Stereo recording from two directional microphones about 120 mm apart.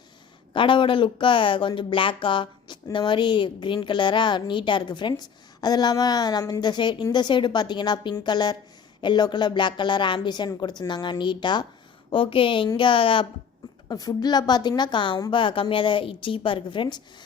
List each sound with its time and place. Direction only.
0.5 s a woman's voice: 45° left (ahead or behind)
13.8 s a woman's voice: 30° left (ahead or behind)